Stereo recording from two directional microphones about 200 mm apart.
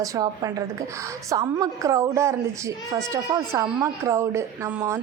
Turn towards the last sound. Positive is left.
turn(degrees=-10)  # may be behind; listen again after turning